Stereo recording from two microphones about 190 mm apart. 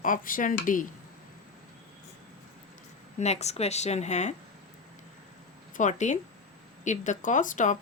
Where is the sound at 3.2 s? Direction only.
35° left (ahead or behind).